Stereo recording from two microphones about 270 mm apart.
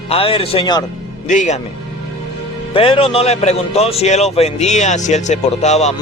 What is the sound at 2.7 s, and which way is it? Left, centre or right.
Speech, centre.